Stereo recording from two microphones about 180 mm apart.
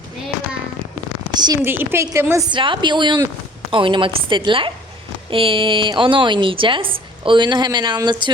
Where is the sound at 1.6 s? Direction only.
10° right (ahead or behind).